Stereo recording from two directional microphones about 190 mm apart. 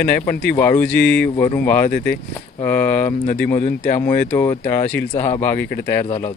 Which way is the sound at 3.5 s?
45° left (ahead or behind).